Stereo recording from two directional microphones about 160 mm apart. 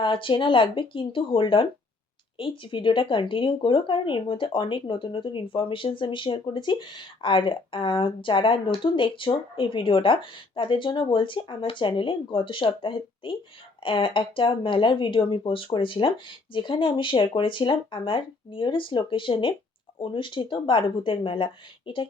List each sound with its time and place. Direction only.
0.0 s speech: 30° left (ahead or behind)